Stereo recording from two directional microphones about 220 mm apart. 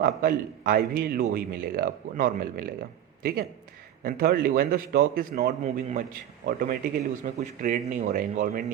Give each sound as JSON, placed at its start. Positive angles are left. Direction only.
{"t": 0.0, "sound": "a man's voice", "side_deg": -40}
{"t": 4.0, "sound": "a man's voice", "side_deg": -40}